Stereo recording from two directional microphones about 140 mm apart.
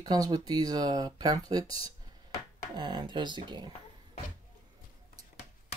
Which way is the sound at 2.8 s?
35° right (ahead or behind).